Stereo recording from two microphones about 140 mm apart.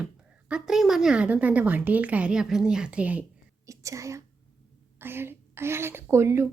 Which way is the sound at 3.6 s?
20° right (ahead or behind).